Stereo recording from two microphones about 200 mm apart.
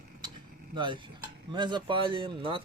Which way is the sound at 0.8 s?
25° right (ahead or behind).